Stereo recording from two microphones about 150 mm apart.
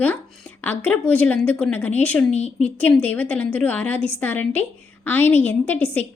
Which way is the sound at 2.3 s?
45° left (ahead or behind).